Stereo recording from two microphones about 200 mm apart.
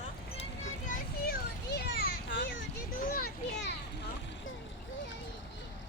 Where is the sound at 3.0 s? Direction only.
45° left (ahead or behind).